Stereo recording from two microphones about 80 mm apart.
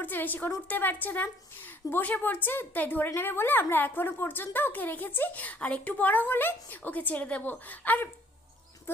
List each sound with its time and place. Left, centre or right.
0.0 s a woman's voice: left